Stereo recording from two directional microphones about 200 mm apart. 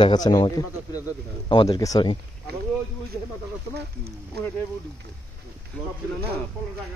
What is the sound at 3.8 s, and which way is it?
Speech, 55° right (ahead or behind).